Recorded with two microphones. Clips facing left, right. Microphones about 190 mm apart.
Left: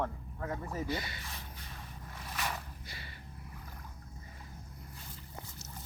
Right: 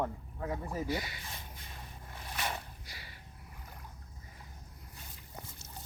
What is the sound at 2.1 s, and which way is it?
Zipper, 20° right (ahead or behind).